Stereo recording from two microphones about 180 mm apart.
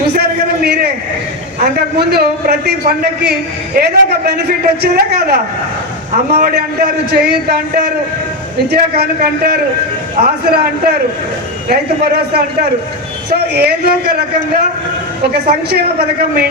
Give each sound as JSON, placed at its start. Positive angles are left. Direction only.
{"t": 0.2, "sound": "a sound", "side_deg": -60}
{"t": 1.5, "sound": "a man's voice", "side_deg": -60}
{"t": 8.7, "sound": "a man's voice", "side_deg": -60}